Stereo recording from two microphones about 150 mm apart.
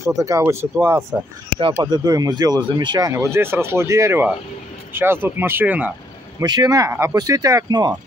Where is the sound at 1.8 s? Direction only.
25° right (ahead or behind); by 5.9 s 10° right (ahead or behind).